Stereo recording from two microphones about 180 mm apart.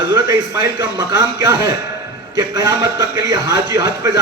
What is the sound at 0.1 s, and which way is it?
A man's voice, 15° right (ahead or behind).